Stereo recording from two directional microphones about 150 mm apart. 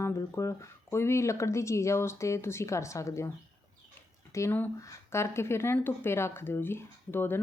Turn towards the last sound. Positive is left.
turn(degrees=15)  # may be behind; listen again after turning